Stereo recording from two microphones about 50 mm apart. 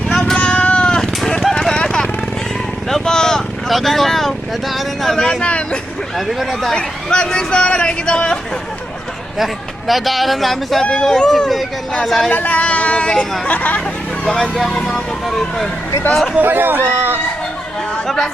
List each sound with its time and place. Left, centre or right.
0.1 s a sound: centre
0.3 s cat: left
1.2 s clip-clop: centre
1.7 s vehicle: centre
3.7 s speech: centre
5.2 s a man's voice: centre
6.1 s speech: centre
6.7 s a man's voice: centre
9.4 s speech: centre
12.3 s a man's voice: left
14.5 s speech: centre
16.4 s speech: right
16.8 s speech: right